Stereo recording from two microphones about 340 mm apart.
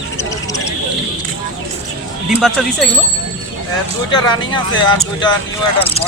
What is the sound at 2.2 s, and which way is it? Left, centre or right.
Speech, centre.